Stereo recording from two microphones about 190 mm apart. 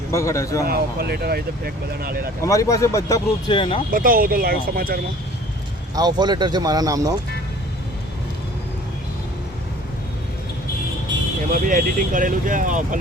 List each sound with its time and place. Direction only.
0.1 s speech: 15° left (ahead or behind)
0.7 s speech: 55° right (ahead or behind)
2.4 s speech: 15° left (ahead or behind)
3.9 s speech: 45° right (ahead or behind)
5.9 s speech: 20° right (ahead or behind)
11.5 s speech: 45° right (ahead or behind)